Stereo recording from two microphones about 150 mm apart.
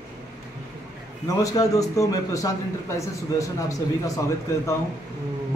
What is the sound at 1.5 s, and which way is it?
A man's voice, 20° left (ahead or behind).